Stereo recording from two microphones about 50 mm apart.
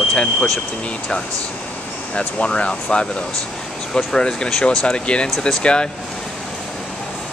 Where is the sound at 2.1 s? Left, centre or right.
Left.